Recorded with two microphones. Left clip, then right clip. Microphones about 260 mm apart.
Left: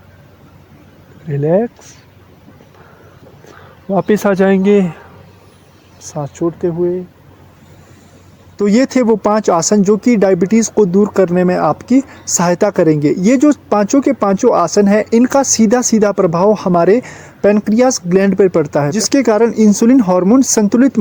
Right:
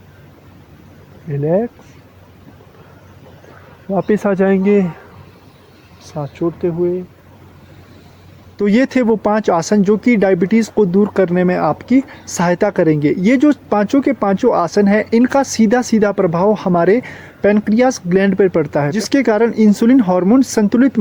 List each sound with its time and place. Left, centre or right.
1.3 s speech: left
3.8 s speech: left
6.0 s speech: left
8.5 s speech: left